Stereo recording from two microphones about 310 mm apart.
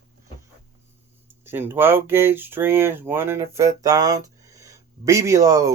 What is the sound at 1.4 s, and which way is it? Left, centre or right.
Speech, centre.